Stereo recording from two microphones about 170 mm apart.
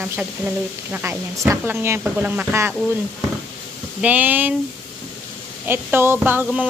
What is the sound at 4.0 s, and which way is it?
Speech, 10° right (ahead or behind).